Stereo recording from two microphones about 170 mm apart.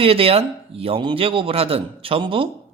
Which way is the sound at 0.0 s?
35° right (ahead or behind).